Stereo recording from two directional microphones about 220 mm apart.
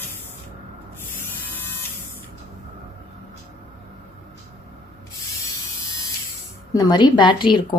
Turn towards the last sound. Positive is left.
turn(degrees=20)  # may be behind; listen again after turning